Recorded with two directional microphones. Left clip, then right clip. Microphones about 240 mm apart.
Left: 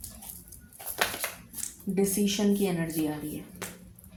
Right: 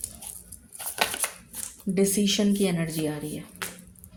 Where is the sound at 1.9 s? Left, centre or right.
Right.